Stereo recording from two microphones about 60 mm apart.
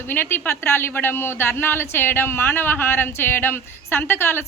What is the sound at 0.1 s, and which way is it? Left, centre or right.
Speech, left.